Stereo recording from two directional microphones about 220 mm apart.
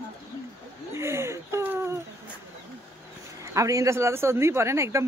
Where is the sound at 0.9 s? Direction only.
10° right (ahead or behind).